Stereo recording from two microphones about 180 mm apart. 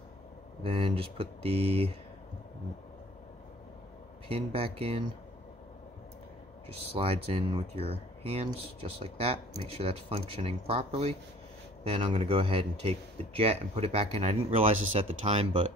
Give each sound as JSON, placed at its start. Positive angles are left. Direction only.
{"t": 0.7, "sound": "speech", "side_deg": -30}
{"t": 4.3, "sound": "speech", "side_deg": -30}
{"t": 6.7, "sound": "speech", "side_deg": -35}